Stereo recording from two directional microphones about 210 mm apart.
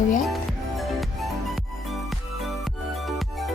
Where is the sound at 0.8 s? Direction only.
Centre (ahead or behind).